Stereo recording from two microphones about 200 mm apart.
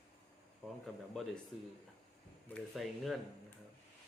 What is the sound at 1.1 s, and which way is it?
Speech, 5° left (ahead or behind).